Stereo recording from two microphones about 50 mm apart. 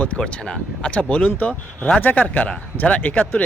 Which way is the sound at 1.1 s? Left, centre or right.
Left.